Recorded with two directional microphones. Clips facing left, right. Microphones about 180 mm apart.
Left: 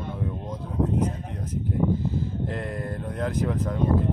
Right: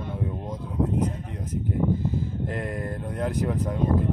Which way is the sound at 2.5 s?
10° right (ahead or behind).